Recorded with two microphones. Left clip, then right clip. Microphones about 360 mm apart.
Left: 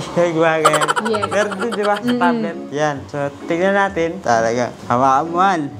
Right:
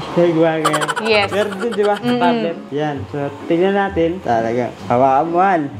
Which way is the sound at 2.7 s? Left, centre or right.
Left.